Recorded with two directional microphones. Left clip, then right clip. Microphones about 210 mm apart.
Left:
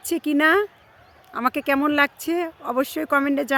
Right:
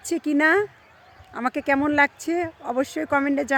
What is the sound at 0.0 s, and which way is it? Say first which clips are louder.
Speech: left 1 dB; 5° left (ahead or behind).